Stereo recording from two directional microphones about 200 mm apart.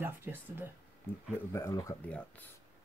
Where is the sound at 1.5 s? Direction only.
15° left (ahead or behind).